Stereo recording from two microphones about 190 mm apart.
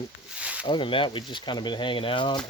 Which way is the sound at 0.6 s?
25° left (ahead or behind).